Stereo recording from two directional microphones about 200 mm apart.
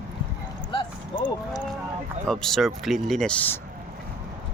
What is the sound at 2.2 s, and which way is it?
Speech, centre (ahead or behind).